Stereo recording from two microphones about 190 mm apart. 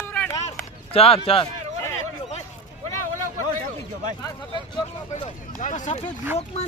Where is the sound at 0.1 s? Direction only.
10° left (ahead or behind).